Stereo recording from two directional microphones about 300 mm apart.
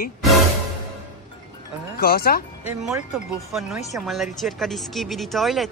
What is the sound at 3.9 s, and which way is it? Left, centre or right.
Speech, centre.